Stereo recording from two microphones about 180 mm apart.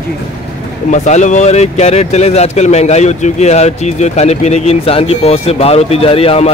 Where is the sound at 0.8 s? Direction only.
40° left (ahead or behind).